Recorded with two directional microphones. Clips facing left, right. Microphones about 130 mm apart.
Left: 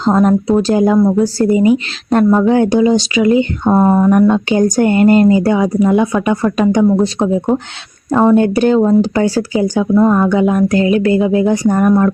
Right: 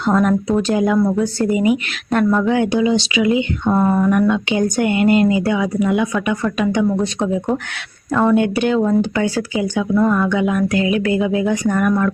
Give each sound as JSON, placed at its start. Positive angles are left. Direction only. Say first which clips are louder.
{"t": 0.0, "sound": "speech", "louder": "left 4 dB", "side_deg": 30}